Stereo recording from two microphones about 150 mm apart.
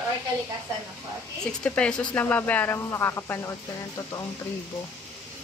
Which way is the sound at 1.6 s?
5° left (ahead or behind).